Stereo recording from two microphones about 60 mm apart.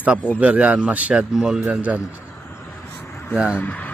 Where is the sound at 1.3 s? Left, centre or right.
Centre.